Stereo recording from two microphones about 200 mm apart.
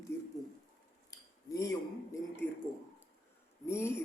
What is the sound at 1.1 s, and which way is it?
Cutlery, 15° left (ahead or behind).